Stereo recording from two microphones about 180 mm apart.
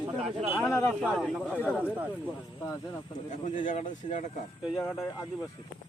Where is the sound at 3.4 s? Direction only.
45° left (ahead or behind).